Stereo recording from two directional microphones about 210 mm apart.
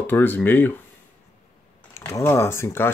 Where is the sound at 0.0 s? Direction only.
10° left (ahead or behind).